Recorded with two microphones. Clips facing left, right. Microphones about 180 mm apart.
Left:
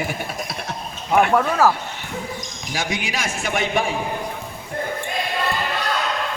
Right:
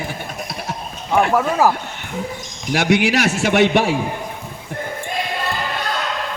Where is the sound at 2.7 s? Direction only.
70° right (ahead or behind).